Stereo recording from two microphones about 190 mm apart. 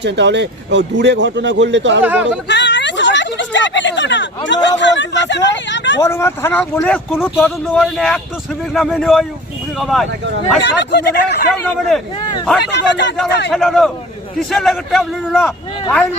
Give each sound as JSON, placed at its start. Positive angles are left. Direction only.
{"t": 0.0, "sound": "a man's voice", "side_deg": -65}
{"t": 2.0, "sound": "speech", "side_deg": -5}
{"t": 2.5, "sound": "a sound", "side_deg": 65}
{"t": 4.8, "sound": "speech", "side_deg": 70}
{"t": 6.0, "sound": "a man's voice", "side_deg": 15}
{"t": 10.6, "sound": "speech", "side_deg": 65}
{"t": 12.7, "sound": "speech", "side_deg": 70}
{"t": 13.5, "sound": "a man's voice", "side_deg": 0}